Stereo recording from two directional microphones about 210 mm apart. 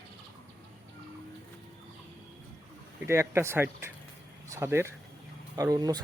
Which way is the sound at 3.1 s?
10° right (ahead or behind).